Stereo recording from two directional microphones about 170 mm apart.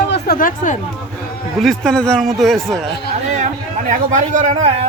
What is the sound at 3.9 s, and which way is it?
Speech, 50° right (ahead or behind).